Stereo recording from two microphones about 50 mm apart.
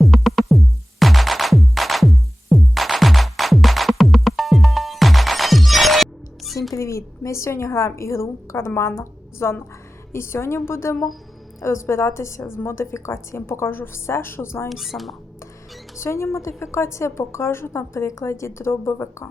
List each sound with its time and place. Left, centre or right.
0.0 s music: centre
6.7 s a woman's voice: left
14.7 s speech: centre
16.0 s a woman's voice: left